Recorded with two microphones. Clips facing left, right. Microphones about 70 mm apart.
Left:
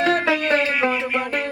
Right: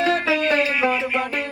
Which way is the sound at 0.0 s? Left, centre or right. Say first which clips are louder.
Left 1 dB; left.